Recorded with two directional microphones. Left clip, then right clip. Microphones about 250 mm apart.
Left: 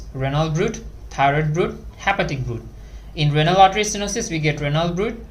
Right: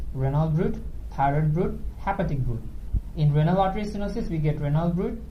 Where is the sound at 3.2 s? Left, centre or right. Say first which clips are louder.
Left 10 dB; left.